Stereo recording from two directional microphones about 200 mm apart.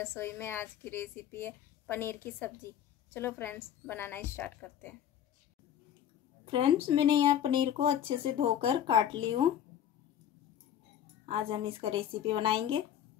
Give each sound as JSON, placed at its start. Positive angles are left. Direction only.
{"t": 0.0, "sound": "speech", "side_deg": 10}
{"t": 6.4, "sound": "speech", "side_deg": -25}
{"t": 11.2, "sound": "speech", "side_deg": -25}